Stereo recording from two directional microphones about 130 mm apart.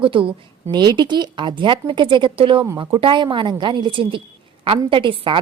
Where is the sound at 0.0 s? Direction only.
40° right (ahead or behind).